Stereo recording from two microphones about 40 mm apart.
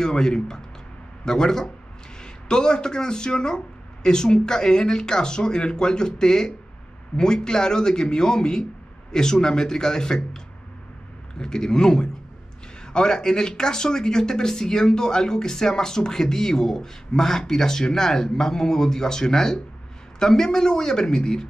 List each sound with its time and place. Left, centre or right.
0.0 s speech: centre